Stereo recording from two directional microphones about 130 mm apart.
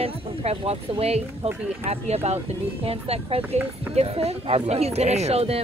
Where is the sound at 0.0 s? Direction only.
50° right (ahead or behind).